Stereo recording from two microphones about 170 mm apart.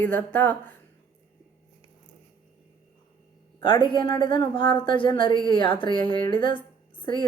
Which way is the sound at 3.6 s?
30° left (ahead or behind).